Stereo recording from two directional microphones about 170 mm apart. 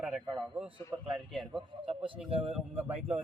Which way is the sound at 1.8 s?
30° right (ahead or behind).